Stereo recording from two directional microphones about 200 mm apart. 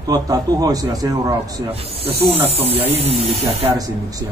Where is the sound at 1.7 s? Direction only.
30° right (ahead or behind).